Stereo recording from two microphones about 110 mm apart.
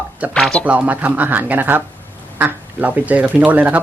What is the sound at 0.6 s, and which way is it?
Speech, 15° right (ahead or behind).